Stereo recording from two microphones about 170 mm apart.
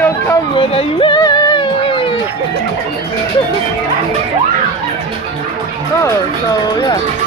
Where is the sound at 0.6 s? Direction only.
30° left (ahead or behind).